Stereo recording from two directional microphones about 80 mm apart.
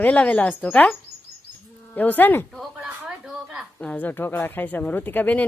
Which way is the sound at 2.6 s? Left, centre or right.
Centre.